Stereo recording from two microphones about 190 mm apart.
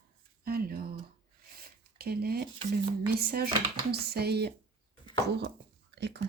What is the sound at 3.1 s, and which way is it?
Dishes, 55° right (ahead or behind).